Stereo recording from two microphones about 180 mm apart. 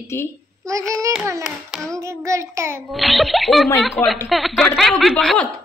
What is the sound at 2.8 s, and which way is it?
Speech, centre (ahead or behind).